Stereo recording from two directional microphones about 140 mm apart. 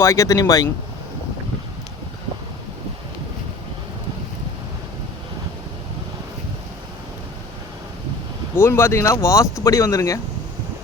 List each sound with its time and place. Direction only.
0.0 s speech: 20° left (ahead or behind)
8.5 s speech: 15° left (ahead or behind)